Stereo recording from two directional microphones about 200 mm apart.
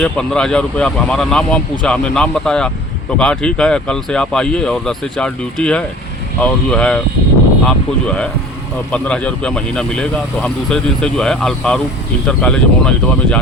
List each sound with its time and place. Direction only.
0.0 s speech: 5° left (ahead or behind)